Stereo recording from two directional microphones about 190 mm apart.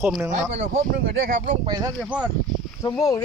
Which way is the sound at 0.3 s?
35° right (ahead or behind).